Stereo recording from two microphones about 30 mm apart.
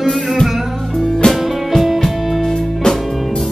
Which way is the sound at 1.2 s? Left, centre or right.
Left.